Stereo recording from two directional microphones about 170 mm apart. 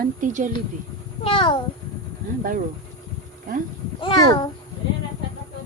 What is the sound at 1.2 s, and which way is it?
Child singing, 30° left (ahead or behind).